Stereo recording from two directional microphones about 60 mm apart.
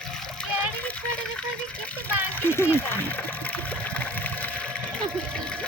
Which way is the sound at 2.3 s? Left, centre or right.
Left.